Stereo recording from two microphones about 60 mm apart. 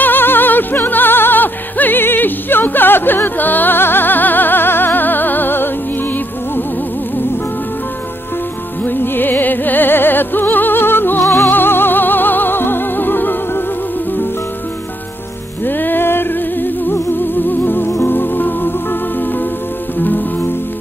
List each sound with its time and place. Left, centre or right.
0.0 s music: left
8.8 s music: left
11.5 s music: left
15.6 s music: left